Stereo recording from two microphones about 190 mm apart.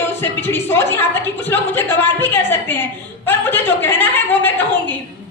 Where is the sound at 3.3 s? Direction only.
10° left (ahead or behind).